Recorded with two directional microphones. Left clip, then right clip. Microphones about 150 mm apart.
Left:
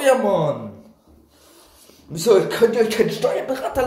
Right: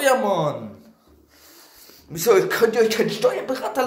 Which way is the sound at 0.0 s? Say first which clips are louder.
Left 2 dB; 5° left (ahead or behind).